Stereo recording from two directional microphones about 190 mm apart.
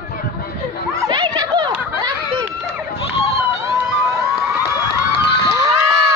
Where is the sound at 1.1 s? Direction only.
20° right (ahead or behind).